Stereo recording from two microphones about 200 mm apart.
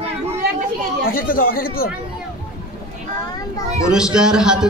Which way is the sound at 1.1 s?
45° left (ahead or behind).